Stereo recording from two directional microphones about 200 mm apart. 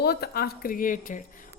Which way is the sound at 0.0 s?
50° left (ahead or behind).